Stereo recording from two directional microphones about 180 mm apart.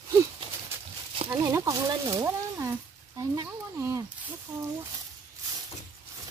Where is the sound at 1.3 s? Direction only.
15° right (ahead or behind).